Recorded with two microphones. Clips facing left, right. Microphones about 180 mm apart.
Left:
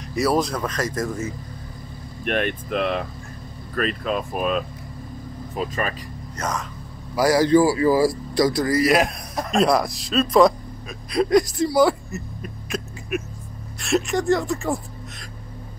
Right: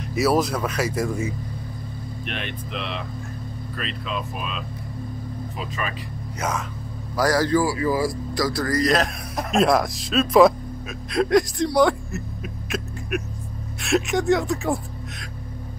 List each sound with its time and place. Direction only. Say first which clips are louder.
0.1 s speech: even; 5° right (ahead or behind)
2.2 s speech: left 10 dB; 50° left (ahead or behind)
6.3 s speech: right 1 dB; 10° right (ahead or behind)
7.2 s a man's voice: left 3 dB; 10° left (ahead or behind)
7.5 s speech: left 5 dB; 25° left (ahead or behind)
8.5 s a man's voice: left 1 dB; 15° left (ahead or behind)
9.3 s speech: right 1 dB; centre (ahead or behind)